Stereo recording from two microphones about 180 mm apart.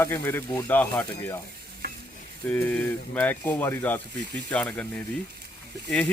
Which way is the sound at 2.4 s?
10° left (ahead or behind).